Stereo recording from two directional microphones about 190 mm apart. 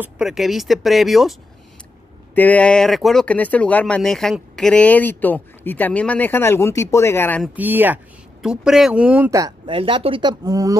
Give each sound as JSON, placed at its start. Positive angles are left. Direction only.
{"t": 0.0, "sound": "speech", "side_deg": 0}
{"t": 2.3, "sound": "speech", "side_deg": 10}
{"t": 7.5, "sound": "speech", "side_deg": -10}
{"t": 9.8, "sound": "speech", "side_deg": -30}